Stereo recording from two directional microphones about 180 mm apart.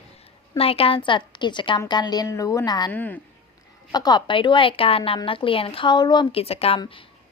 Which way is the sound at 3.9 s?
20° left (ahead or behind).